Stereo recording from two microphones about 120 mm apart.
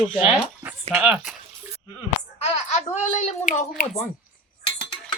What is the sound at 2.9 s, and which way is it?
Speech, 75° left (ahead or behind).